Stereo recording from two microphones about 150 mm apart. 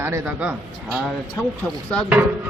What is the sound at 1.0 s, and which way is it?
Speech, 5° left (ahead or behind).